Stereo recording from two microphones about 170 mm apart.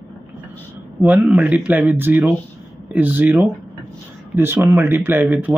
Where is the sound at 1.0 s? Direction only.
10° right (ahead or behind).